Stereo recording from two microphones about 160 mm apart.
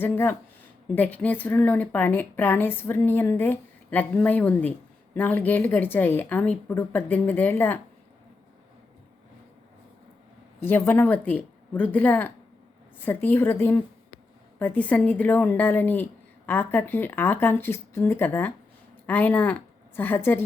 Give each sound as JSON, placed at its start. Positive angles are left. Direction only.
{"t": 0.0, "sound": "a woman's voice", "side_deg": 15}
{"t": 10.6, "sound": "a woman's voice", "side_deg": 15}